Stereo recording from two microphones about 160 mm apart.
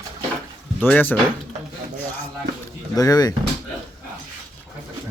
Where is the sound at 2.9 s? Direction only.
25° left (ahead or behind).